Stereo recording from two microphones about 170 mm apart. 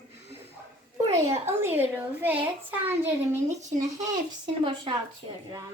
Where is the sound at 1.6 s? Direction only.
10° right (ahead or behind).